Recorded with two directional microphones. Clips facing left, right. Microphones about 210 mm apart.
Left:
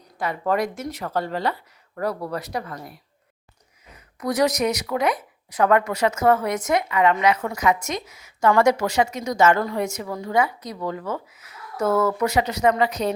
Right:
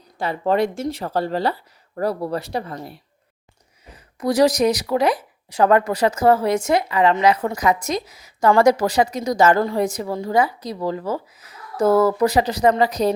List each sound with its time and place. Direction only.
0.2 s speech: 30° right (ahead or behind)